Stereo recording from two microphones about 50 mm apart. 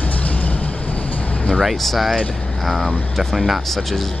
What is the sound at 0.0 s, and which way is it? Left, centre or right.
Vehicle, left.